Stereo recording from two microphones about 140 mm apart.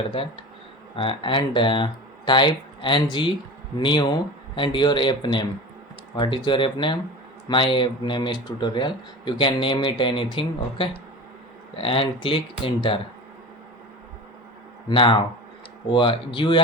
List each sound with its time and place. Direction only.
0.2 s speech: 40° left (ahead or behind)
14.8 s speech: 35° left (ahead or behind)